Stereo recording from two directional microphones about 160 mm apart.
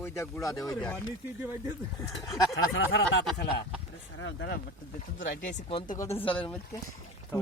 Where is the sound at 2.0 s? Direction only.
Centre (ahead or behind).